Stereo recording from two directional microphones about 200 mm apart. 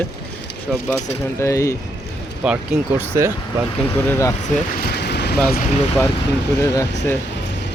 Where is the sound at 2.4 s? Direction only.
10° right (ahead or behind).